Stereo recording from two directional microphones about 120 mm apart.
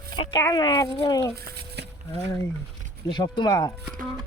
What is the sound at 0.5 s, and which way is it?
Speech, 35° left (ahead or behind).